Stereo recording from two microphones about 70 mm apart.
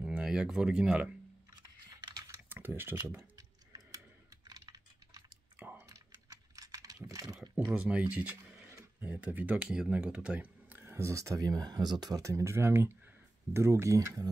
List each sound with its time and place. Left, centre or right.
0.0 s speech: centre
1.5 s typing: right
2.5 s speech: right
3.2 s a sound: right
4.5 s typing: right
5.8 s typing: right
7.7 s a sound: centre; by 9.1 s right
9.1 s speech: right
9.7 s speech: centre; by 11.4 s right
11.4 s speech: right
12.2 s speech: right